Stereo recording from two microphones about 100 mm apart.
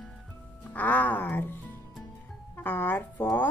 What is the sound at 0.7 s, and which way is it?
Speech, 15° left (ahead or behind).